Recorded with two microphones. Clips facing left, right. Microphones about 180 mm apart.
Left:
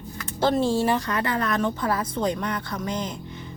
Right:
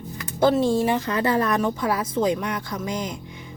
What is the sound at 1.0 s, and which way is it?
Speech, 25° right (ahead or behind).